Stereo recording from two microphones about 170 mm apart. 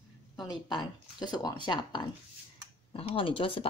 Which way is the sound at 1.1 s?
25° left (ahead or behind).